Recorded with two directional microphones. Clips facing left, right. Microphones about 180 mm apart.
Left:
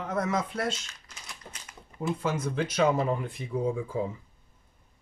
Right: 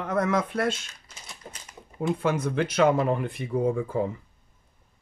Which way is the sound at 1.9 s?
60° right (ahead or behind).